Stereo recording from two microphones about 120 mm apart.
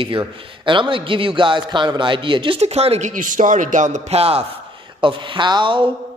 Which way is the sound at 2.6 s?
60° right (ahead or behind).